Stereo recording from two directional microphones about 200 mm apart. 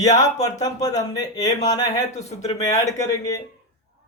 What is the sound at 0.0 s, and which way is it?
A man's voice, 20° left (ahead or behind).